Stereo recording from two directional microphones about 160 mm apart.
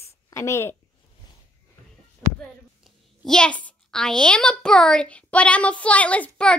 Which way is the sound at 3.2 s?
5° left (ahead or behind).